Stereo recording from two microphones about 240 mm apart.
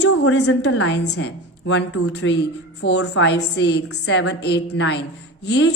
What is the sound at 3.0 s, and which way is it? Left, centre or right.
A woman's voice, left.